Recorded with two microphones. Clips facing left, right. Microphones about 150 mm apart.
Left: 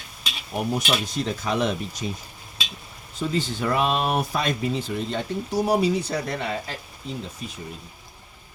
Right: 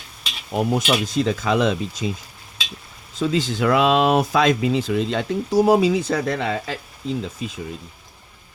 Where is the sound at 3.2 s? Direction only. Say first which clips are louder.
Right 5 dB; 90° right.